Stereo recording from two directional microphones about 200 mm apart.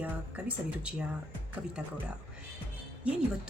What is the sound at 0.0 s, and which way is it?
A woman's voice, 5° right (ahead or behind).